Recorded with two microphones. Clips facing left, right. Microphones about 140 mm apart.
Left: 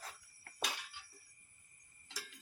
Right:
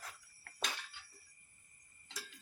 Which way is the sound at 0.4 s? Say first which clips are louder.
Left 1 dB; 10° left (ahead or behind).